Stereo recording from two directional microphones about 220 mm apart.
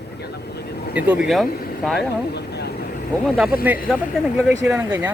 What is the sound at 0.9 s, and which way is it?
Speech, 5° right (ahead or behind).